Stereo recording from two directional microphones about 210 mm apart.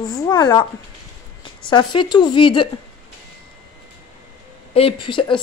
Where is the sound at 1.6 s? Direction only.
20° left (ahead or behind).